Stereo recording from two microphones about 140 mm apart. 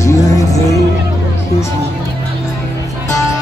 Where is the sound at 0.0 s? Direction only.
25° left (ahead or behind).